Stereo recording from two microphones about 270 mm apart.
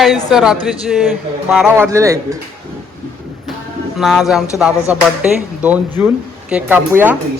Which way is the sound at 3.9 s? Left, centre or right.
Centre.